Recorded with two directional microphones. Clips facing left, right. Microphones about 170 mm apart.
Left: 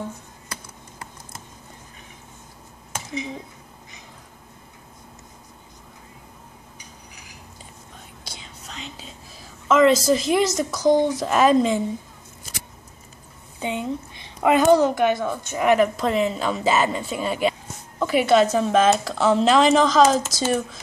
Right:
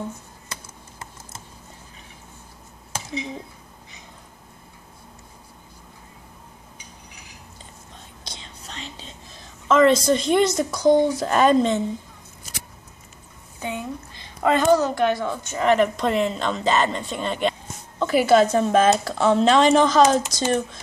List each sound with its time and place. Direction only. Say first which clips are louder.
0.5 s typing: left 1 dB; 25° right (ahead or behind)
8.2 s whispering: right 2 dB; 5° left (ahead or behind)
13.6 s a sound: left 3 dB; 20° left (ahead or behind)
14.7 s a woman's voice: left 2 dB; 15° left (ahead or behind)